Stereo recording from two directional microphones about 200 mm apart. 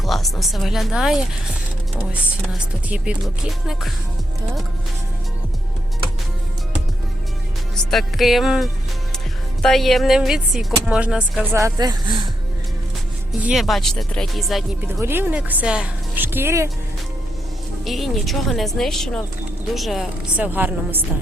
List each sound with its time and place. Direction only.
0.0 s speech: centre (ahead or behind)
2.5 s speech: 5° right (ahead or behind)
7.9 s speech: centre (ahead or behind)
11.5 s speech: 15° right (ahead or behind)
13.4 s speech: centre (ahead or behind)
14.9 s speech: 10° right (ahead or behind)
17.8 s speech: centre (ahead or behind)